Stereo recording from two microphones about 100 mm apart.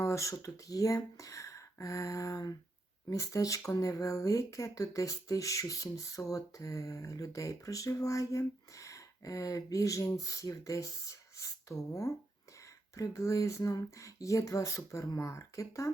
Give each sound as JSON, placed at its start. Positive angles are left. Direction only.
{"t": 0.0, "sound": "speech", "side_deg": 30}